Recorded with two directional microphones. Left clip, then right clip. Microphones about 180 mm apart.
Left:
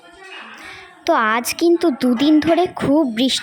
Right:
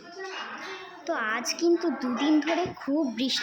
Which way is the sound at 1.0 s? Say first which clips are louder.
Left 13 dB; 40° left (ahead or behind).